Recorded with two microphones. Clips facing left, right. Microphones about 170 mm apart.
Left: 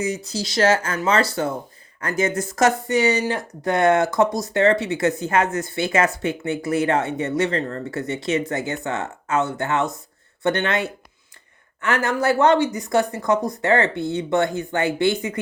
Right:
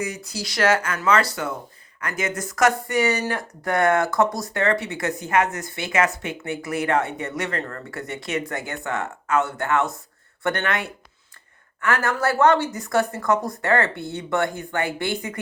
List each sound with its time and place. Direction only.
0.0 s speech: 20° left (ahead or behind)